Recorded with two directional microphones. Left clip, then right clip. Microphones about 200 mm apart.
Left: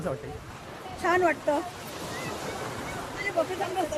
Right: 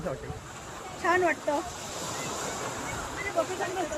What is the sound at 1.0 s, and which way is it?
Speech, 20° left (ahead or behind).